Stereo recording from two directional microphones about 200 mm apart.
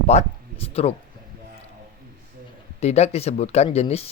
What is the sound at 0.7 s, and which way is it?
Speech, 30° left (ahead or behind).